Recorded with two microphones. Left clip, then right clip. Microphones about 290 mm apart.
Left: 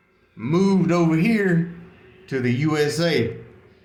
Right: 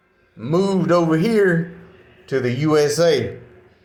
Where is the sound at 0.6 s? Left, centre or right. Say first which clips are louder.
Right 4 dB; centre.